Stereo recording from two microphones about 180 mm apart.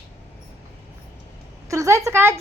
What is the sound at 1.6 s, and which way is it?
Speech, 15° right (ahead or behind).